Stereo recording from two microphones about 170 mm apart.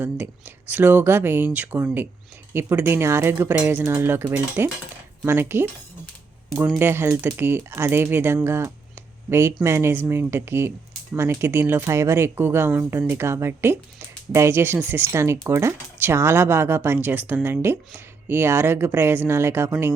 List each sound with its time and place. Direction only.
0.0 s speech: 10° right (ahead or behind)
6.7 s speech: 15° right (ahead or behind)